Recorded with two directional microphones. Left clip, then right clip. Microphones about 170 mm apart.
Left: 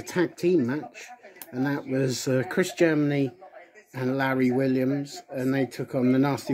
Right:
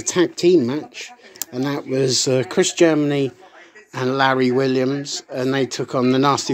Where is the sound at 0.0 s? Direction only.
Centre (ahead or behind).